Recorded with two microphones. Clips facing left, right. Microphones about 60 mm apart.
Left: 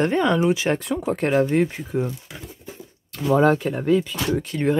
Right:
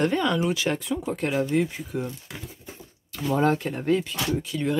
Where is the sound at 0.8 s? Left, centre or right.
Left.